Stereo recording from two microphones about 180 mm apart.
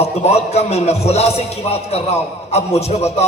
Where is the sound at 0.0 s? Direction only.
35° left (ahead or behind).